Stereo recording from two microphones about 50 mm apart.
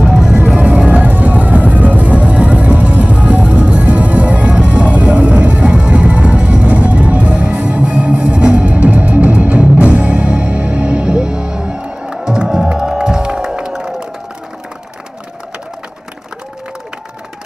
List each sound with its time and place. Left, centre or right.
0.1 s vehicle: centre
0.5 s music: right